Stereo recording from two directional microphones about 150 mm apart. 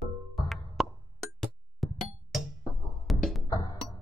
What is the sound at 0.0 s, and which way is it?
Music, centre (ahead or behind).